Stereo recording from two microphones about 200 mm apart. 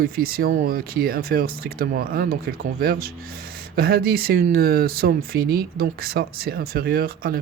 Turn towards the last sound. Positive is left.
turn(degrees=-50)  # may be behind; listen again after turning